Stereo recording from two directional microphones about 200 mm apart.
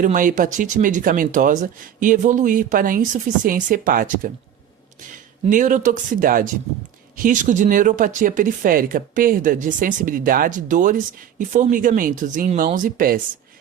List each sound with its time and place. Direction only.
0.0 s speech: 40° right (ahead or behind)
5.5 s speech: 40° right (ahead or behind)